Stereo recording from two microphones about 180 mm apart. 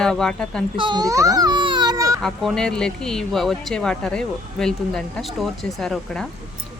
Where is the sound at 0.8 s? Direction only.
25° right (ahead or behind).